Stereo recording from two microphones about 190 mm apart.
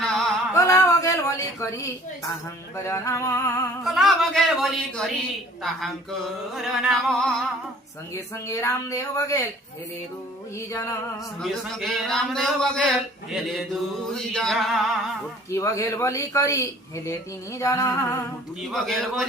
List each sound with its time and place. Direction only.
0.0 s music: 5° left (ahead or behind)
0.5 s a sound: 15° left (ahead or behind)
2.7 s speech: 15° left (ahead or behind)
3.8 s speech: centre (ahead or behind)
8.1 s speech: 15° left (ahead or behind)
10.7 s speech: 15° left (ahead or behind)
11.3 s speech: centre (ahead or behind)
15.4 s speech: 15° left (ahead or behind)
18.7 s speech: centre (ahead or behind)